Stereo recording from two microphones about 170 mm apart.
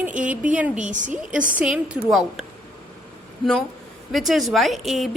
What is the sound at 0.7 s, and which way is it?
Speech, 45° right (ahead or behind).